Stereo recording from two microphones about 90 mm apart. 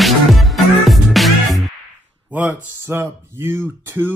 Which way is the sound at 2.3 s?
15° right (ahead or behind).